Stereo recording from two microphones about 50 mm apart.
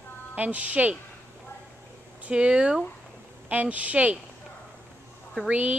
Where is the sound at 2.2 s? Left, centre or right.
Right.